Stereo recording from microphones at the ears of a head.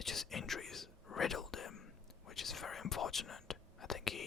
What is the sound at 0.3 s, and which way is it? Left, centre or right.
Whispering, left.